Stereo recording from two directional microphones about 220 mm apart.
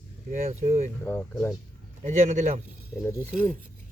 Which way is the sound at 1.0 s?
10° left (ahead or behind).